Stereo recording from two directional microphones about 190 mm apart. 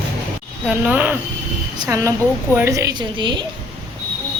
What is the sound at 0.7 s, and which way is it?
A woman's voice, 10° right (ahead or behind).